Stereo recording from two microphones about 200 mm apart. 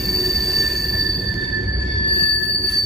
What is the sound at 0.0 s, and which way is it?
Train wheels squealing, centre (ahead or behind).